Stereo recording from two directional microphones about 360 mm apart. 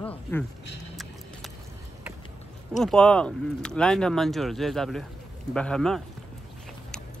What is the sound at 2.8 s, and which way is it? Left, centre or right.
Speech, centre.